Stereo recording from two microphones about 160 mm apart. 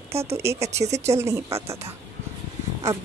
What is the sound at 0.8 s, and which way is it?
Speech, 45° right (ahead or behind).